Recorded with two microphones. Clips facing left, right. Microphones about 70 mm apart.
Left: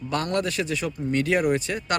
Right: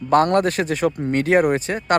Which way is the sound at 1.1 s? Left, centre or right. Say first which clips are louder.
Right 4 dB; right.